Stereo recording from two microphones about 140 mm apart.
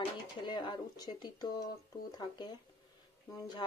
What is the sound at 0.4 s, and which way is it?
Speech, 30° left (ahead or behind).